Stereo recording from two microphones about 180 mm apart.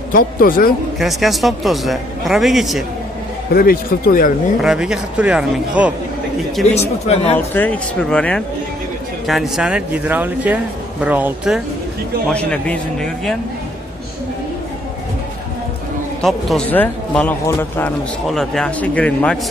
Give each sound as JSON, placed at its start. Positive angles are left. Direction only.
{"t": 0.1, "sound": "speech", "side_deg": 50}
{"t": 0.9, "sound": "speech", "side_deg": 0}
{"t": 3.5, "sound": "speech", "side_deg": 55}
{"t": 4.6, "sound": "speech", "side_deg": -5}
{"t": 6.7, "sound": "speech", "side_deg": 35}
{"t": 7.3, "sound": "speech", "side_deg": 10}
{"t": 12.3, "sound": "speech", "side_deg": 5}
{"t": 16.2, "sound": "speech", "side_deg": 0}